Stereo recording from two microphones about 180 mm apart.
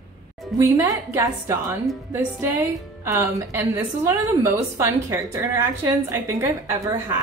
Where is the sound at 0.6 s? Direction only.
15° right (ahead or behind).